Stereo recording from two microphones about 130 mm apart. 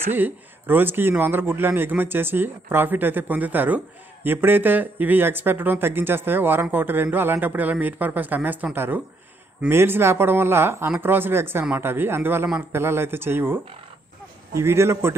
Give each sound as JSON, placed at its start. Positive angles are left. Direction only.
{"t": 0.1, "sound": "a man's voice", "side_deg": -15}